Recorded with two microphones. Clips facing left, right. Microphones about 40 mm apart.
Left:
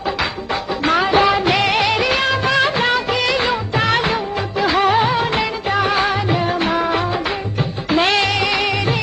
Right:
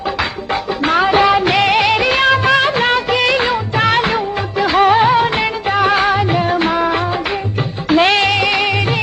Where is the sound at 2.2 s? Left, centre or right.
Centre.